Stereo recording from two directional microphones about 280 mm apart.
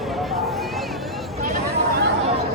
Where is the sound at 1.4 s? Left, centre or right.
Right.